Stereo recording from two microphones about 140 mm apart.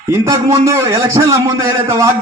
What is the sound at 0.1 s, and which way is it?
A man's voice, 20° right (ahead or behind).